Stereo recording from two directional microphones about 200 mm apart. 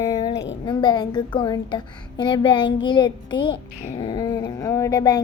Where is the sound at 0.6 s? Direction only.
25° left (ahead or behind).